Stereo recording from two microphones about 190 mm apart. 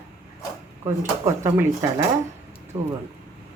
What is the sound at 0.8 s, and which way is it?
Speech, 15° right (ahead or behind).